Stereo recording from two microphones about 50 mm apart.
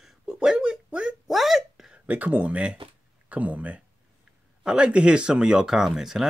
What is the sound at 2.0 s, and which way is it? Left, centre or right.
Speech, right.